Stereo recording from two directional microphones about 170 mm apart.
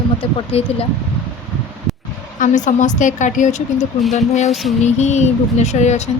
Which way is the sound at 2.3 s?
50° left (ahead or behind).